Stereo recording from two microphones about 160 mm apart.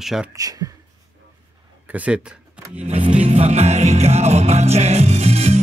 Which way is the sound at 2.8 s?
40° right (ahead or behind).